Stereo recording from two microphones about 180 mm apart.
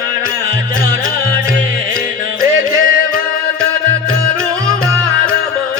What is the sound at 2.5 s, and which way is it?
Music, 90° right.